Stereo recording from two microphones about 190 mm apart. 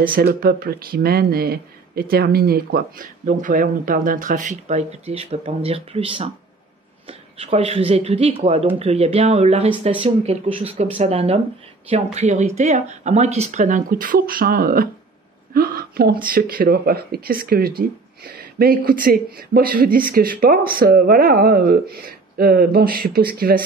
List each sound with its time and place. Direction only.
0.0 s speech: 50° right (ahead or behind)